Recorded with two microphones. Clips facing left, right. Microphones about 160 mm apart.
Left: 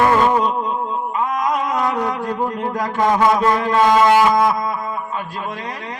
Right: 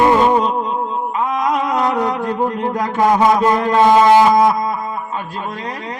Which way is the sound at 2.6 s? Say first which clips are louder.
Right 3 dB; 20° right (ahead or behind).